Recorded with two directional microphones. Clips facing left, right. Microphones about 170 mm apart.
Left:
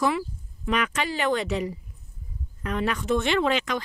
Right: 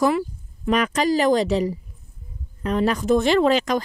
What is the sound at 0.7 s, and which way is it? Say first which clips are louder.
Speech: right 7 dB; 40° right (ahead or behind).